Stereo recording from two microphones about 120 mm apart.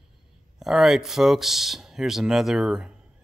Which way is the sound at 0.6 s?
5° right (ahead or behind).